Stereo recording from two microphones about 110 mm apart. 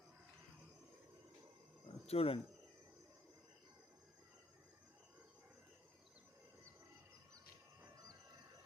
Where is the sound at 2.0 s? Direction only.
65° left (ahead or behind).